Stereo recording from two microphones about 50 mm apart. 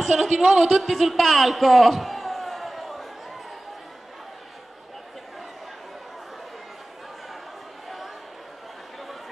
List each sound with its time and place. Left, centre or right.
0.0 s a woman's voice: centre